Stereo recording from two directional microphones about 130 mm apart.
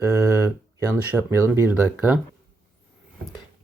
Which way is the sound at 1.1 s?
20° right (ahead or behind).